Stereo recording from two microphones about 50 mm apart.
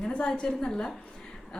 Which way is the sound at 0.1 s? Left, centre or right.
Left.